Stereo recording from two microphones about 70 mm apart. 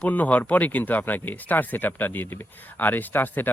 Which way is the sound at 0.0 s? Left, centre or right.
Left.